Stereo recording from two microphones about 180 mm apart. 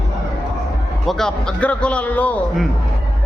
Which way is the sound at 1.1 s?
5° left (ahead or behind).